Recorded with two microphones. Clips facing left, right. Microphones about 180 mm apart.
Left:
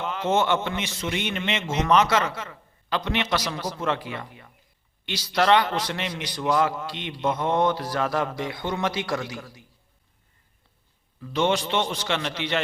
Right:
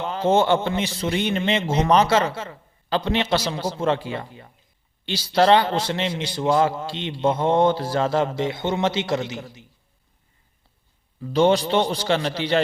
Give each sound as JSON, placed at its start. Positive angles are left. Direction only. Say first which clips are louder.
{"t": 0.0, "sound": "a man's voice", "louder": "right 4 dB", "side_deg": -30}
{"t": 11.2, "sound": "a man's voice", "louder": "right 6 dB", "side_deg": -35}